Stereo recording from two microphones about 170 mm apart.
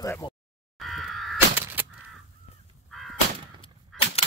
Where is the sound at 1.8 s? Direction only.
10° right (ahead or behind).